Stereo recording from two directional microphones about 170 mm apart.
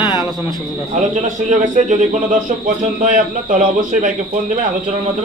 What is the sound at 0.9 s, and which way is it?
A man's voice, 50° right (ahead or behind).